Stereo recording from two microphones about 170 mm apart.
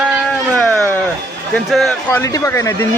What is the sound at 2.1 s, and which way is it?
Speech, 15° left (ahead or behind).